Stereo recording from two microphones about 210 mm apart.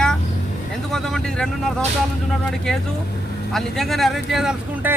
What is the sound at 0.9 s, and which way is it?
Speech, centre (ahead or behind).